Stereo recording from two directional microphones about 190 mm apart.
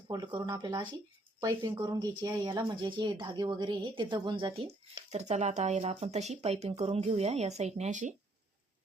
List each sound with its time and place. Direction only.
0.1 s speech: 20° right (ahead or behind); by 8.1 s 40° right (ahead or behind)